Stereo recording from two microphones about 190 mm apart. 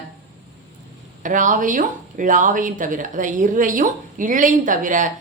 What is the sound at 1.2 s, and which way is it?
Speech, 40° right (ahead or behind).